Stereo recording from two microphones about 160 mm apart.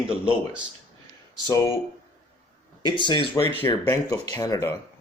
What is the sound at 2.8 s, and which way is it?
Speech, 30° left (ahead or behind).